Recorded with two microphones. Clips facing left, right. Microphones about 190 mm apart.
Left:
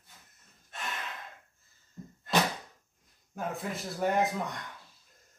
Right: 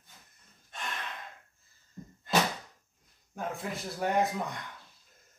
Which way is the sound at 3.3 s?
Centre (ahead or behind).